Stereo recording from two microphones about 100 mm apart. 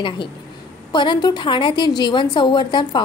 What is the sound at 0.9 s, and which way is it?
A woman's voice, 50° left (ahead or behind).